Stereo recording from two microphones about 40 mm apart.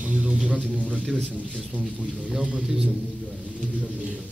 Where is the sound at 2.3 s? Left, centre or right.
Centre.